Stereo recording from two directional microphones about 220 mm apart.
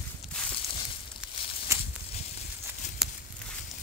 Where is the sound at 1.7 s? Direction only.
15° right (ahead or behind).